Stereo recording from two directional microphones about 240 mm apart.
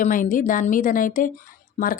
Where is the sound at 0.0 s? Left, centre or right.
Left.